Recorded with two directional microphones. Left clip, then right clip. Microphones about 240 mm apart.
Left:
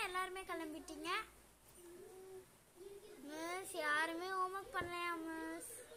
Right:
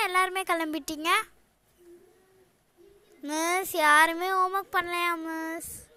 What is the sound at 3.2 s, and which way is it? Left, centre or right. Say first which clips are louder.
Speech: right 18 dB; right.